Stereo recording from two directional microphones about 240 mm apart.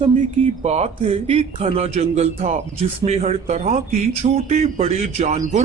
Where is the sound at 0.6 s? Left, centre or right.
Right.